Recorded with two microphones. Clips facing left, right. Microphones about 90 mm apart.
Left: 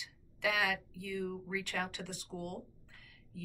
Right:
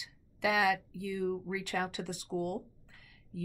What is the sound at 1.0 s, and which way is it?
Speech, 15° right (ahead or behind).